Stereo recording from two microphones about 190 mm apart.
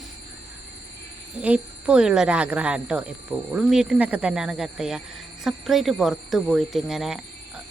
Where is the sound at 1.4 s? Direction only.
5° right (ahead or behind).